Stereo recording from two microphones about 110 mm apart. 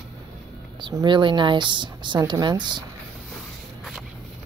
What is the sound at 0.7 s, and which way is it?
Speech, 45° right (ahead or behind).